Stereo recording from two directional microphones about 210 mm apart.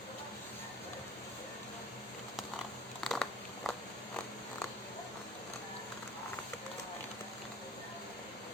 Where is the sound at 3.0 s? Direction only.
Centre (ahead or behind).